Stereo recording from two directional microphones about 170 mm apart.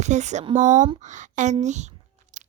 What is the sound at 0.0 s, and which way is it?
A woman's voice, 45° right (ahead or behind).